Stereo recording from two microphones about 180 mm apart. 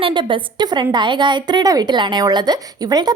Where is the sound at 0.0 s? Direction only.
25° right (ahead or behind).